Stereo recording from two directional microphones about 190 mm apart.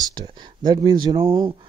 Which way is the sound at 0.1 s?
20° right (ahead or behind).